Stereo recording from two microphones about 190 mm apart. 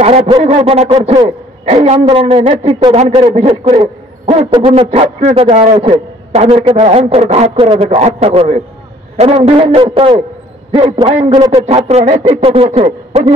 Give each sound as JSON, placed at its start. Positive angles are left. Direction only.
{"t": 0.0, "sound": "a man's voice", "side_deg": -30}